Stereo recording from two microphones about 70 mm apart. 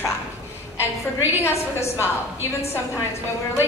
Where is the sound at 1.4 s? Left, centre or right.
Left.